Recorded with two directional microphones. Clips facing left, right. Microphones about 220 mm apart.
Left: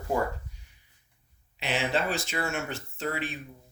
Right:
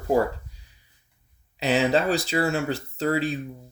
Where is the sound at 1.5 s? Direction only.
40° right (ahead or behind).